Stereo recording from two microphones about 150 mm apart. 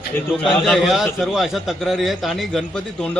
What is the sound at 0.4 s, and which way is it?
A man's voice, centre (ahead or behind).